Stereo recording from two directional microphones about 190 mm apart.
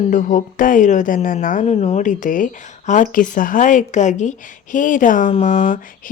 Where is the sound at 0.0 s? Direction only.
40° left (ahead or behind).